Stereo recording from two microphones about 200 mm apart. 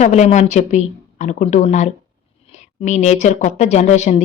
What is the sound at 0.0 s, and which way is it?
A woman's voice, 35° left (ahead or behind).